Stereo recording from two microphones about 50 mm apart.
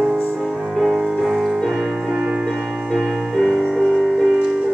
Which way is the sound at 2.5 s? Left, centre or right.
Centre.